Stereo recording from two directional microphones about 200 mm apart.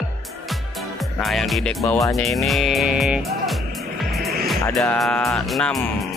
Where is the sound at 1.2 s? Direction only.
Centre (ahead or behind).